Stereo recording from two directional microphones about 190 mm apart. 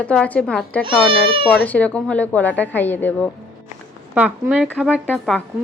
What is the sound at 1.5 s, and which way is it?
Speech, 10° left (ahead or behind).